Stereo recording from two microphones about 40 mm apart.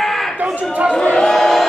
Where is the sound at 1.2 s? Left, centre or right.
Centre.